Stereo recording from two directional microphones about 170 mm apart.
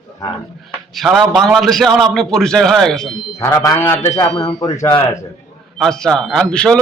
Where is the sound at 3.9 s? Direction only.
40° left (ahead or behind).